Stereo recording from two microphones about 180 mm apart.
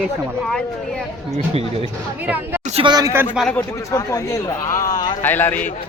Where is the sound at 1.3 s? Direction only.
35° right (ahead or behind).